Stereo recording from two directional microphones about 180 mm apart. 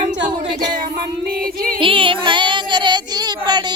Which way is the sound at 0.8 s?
55° right (ahead or behind).